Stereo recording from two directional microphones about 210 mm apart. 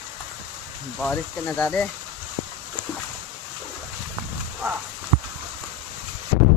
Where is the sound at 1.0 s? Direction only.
5° left (ahead or behind).